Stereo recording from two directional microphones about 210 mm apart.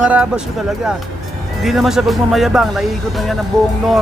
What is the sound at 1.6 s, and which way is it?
Speech, centre (ahead or behind).